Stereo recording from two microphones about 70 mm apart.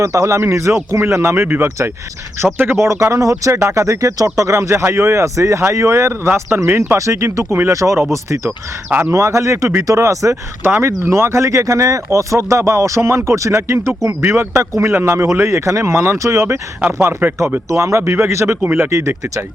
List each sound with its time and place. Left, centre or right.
0.0 s speech: right
8.9 s speech: right
9.1 s speech: right
10.7 s speech: right
14.2 s speech: right
17.0 s speech: right
17.7 s speech: right
18.9 s speech: right